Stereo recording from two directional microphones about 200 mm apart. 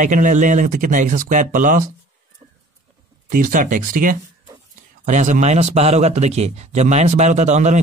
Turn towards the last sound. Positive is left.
turn(degrees=-35)  # may be behind; listen again after turning